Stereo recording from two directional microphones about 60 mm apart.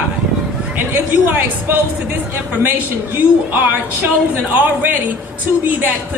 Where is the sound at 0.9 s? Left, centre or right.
Right.